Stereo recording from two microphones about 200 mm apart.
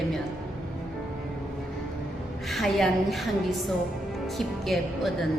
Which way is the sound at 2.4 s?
Centre (ahead or behind).